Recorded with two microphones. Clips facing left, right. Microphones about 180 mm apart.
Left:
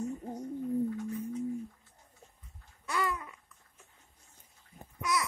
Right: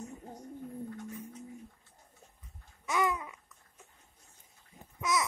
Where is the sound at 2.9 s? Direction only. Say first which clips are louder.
Right 3 dB; 20° right (ahead or behind).